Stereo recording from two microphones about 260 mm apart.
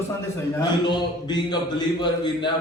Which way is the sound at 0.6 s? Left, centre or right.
Centre.